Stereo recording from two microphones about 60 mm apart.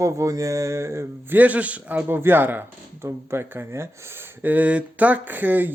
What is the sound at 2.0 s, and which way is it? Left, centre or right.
Speech, right.